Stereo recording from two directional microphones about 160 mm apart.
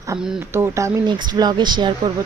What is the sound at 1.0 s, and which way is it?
Speech, 25° right (ahead or behind).